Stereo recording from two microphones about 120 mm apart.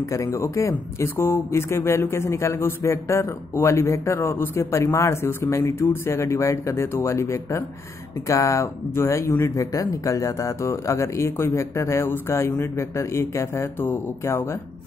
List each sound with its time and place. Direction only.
0.1 s speech: 25° left (ahead or behind)